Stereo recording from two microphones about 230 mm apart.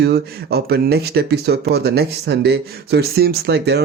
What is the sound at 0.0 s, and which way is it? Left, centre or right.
Speech, right.